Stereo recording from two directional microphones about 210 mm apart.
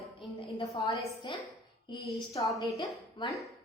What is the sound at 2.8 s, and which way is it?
Speech, 20° left (ahead or behind).